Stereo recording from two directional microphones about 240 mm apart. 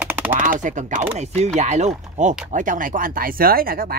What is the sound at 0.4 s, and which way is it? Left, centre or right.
Speech, right.